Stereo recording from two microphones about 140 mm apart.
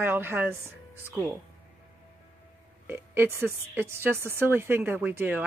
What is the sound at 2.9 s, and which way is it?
Speech, 15° right (ahead or behind).